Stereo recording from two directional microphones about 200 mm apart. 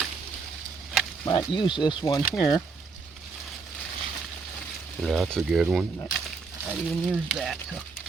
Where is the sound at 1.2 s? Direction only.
25° left (ahead or behind).